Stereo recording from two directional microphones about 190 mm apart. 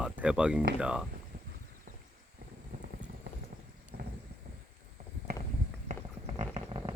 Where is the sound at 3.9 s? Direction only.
55° right (ahead or behind).